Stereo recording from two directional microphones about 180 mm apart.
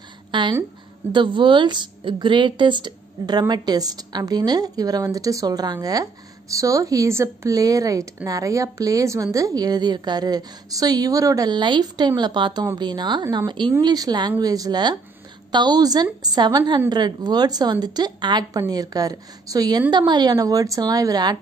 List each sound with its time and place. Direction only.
0.3 s speech: 25° right (ahead or behind)